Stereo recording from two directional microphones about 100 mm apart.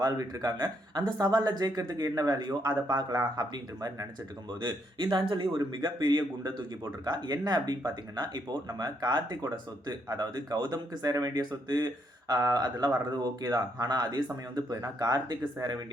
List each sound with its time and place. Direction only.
0.0 s speech: 40° right (ahead or behind)